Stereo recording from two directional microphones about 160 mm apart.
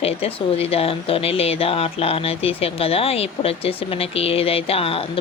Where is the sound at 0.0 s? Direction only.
40° left (ahead or behind).